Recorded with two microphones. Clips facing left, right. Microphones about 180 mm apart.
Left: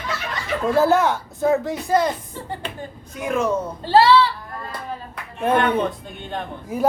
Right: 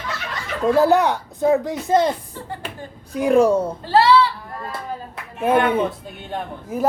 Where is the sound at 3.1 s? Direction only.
35° right (ahead or behind).